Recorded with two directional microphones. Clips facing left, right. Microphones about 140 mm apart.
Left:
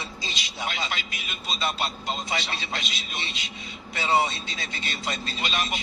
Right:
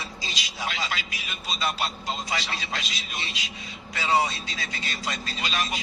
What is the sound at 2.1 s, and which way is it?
Speech, 25° left (ahead or behind).